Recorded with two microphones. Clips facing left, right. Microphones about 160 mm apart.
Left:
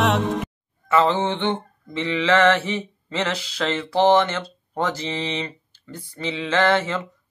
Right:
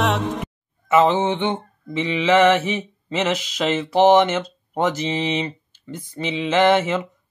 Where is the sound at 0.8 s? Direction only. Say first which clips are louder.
Right 3 dB; 20° right (ahead or behind).